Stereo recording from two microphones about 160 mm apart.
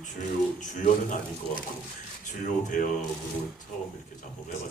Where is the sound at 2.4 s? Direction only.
55° left (ahead or behind).